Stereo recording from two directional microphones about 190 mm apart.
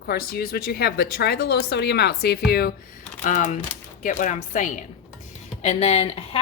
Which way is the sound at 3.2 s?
40° left (ahead or behind).